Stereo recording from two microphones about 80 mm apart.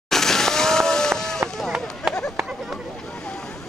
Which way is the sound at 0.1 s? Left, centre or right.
Centre.